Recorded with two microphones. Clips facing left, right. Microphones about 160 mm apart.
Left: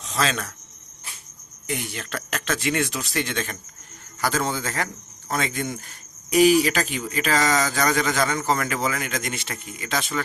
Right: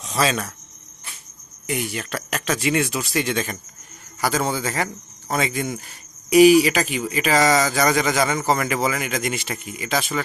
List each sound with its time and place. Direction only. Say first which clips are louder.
0.0 s speech: right 3 dB; 10° right (ahead or behind)
1.6 s speech: right 4 dB; 10° right (ahead or behind)